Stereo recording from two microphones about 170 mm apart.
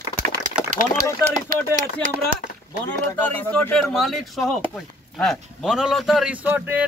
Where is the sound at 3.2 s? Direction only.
10° left (ahead or behind); by 6.8 s 10° right (ahead or behind).